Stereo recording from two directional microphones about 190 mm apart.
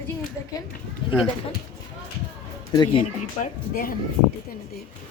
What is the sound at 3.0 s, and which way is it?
Speech, 45° left (ahead or behind).